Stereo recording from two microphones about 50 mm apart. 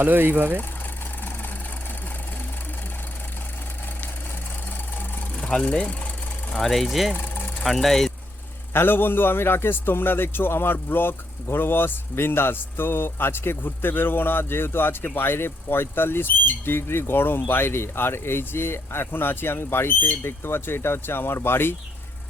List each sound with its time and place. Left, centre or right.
0.0 s speech: right
5.6 s speech: left
6.6 s speech: centre
7.2 s vehicle: left
7.6 s speech: centre
8.7 s a man's voice: left